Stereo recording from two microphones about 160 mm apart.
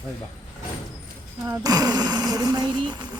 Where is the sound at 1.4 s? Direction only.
20° right (ahead or behind).